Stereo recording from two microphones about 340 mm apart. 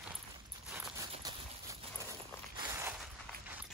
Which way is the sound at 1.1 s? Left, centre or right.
Centre.